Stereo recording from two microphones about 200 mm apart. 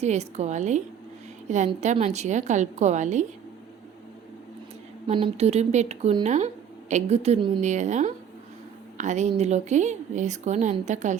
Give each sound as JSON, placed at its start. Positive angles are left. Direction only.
{"t": 0.0, "sound": "speech", "side_deg": -35}
{"t": 5.1, "sound": "speech", "side_deg": -30}